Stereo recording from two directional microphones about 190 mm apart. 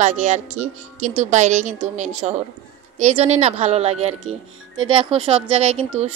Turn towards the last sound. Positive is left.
turn(degrees=-35)  # may be behind; listen again after turning